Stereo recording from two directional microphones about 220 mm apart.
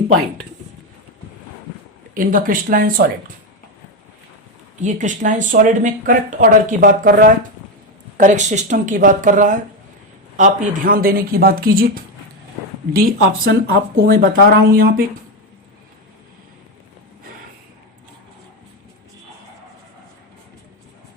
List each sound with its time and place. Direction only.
2.1 s speech: 40° right (ahead or behind)
4.8 s speech: 35° right (ahead or behind)